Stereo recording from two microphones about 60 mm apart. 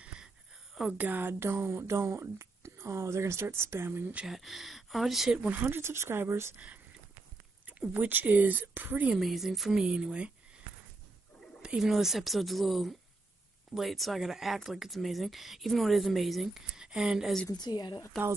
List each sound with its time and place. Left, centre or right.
0.9 s speech: right
4.3 s speech: centre
5.5 s speech: right
5.8 s speech: right
7.8 s speech: right
9.1 s speech: centre
11.6 s speech: centre
18.1 s speech: centre